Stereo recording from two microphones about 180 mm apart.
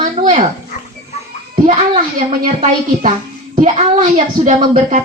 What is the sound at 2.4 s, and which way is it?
A woman's voice, 45° right (ahead or behind).